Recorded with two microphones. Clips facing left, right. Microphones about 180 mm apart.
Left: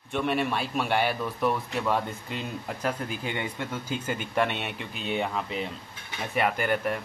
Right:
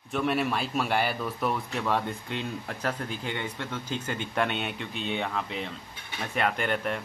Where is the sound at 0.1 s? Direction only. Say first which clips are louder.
Even; centre (ahead or behind).